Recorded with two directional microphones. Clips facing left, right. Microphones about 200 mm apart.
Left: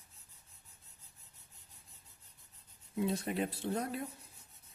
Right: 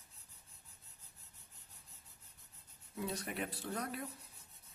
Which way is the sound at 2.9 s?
25° left (ahead or behind).